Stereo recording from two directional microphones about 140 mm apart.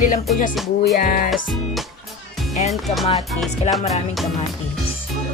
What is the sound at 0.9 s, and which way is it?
Music, 90° left.